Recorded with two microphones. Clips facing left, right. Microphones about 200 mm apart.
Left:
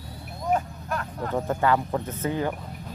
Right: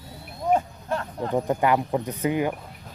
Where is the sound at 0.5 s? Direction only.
25° right (ahead or behind).